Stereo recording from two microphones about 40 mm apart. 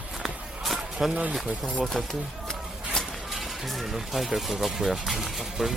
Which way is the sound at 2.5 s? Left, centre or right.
Centre.